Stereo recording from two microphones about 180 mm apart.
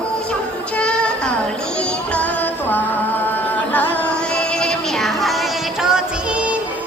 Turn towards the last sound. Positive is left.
turn(degrees=-5)  # may be behind; listen again after turning